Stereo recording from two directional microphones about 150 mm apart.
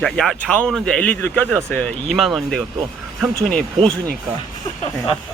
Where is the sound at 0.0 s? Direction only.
5° left (ahead or behind).